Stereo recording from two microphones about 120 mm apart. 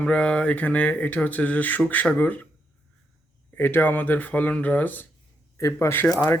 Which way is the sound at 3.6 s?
15° left (ahead or behind).